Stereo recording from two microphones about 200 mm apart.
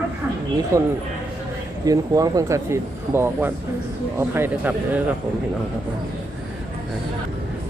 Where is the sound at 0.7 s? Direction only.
15° right (ahead or behind).